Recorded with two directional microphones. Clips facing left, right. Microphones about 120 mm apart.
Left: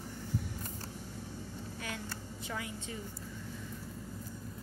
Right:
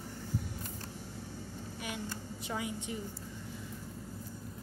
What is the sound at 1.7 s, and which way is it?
A woman's voice, 15° right (ahead or behind).